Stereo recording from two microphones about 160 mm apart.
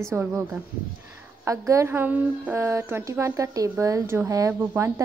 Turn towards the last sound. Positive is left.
turn(degrees=-15)  # may be behind; listen again after turning